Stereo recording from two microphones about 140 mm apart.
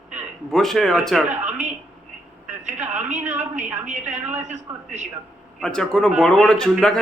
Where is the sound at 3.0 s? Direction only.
60° right (ahead or behind).